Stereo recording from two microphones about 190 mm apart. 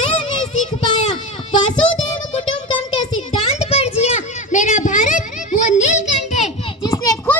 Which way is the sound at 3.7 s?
35° left (ahead or behind).